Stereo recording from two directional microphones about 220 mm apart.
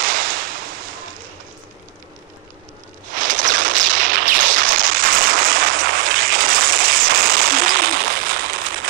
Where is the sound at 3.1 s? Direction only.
35° right (ahead or behind).